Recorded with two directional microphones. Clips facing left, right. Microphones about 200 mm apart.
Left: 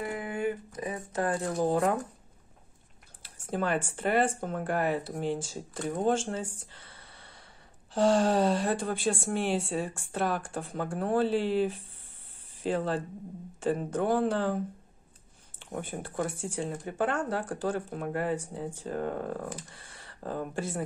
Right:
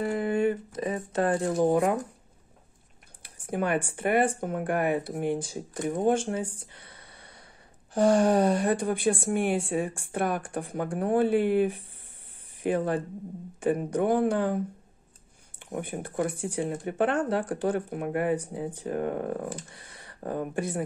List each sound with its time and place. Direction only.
0.0 s speech: 35° right (ahead or behind); by 2.0 s 15° right (ahead or behind)
3.2 s speech: 15° right (ahead or behind)
6.7 s a sound: 15° right (ahead or behind)
7.9 s speech: 15° right (ahead or behind)
15.6 s speech: 15° right (ahead or behind)